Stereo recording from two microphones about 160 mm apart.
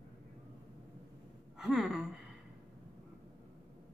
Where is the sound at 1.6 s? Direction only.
5° right (ahead or behind).